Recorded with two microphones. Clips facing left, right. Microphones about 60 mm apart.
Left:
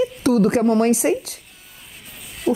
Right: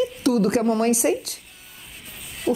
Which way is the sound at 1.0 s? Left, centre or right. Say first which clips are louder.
Left 2 dB; left.